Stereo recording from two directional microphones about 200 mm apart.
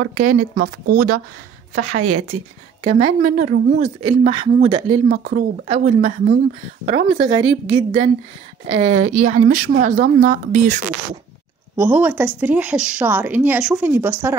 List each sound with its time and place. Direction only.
0.0 s speech: 40° right (ahead or behind)
1.8 s a woman's voice: 90° right
2.8 s speech: 35° right (ahead or behind)
5.1 s speech: 45° right (ahead or behind)
5.7 s speech: 35° right (ahead or behind)
11.7 s a woman's voice: 10° right (ahead or behind)